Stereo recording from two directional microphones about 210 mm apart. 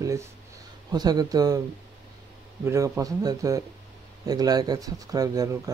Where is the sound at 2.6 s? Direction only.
15° right (ahead or behind).